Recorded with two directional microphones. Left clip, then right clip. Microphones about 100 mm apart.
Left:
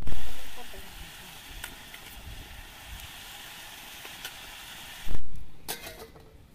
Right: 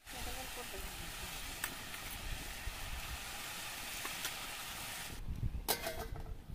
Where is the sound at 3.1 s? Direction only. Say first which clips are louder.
Left 2 dB; 20° right (ahead or behind).